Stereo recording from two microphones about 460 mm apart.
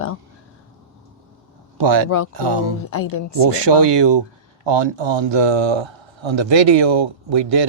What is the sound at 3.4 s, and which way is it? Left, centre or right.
A man's voice, right.